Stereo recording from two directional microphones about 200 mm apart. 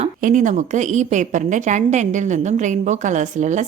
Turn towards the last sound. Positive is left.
turn(degrees=-35)  # may be behind; listen again after turning